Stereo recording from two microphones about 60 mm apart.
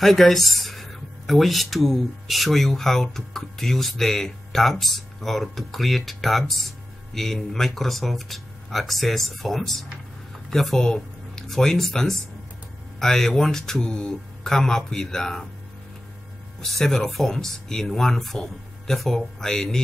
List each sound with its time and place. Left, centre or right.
0.0 s speech: centre
16.6 s speech: centre